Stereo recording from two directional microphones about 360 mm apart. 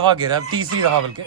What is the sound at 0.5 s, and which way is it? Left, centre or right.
Speech, right.